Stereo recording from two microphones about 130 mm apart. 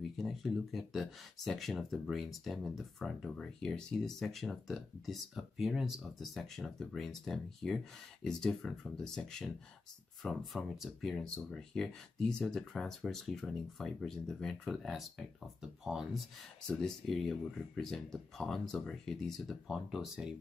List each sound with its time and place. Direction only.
0.2 s speech: centre (ahead or behind)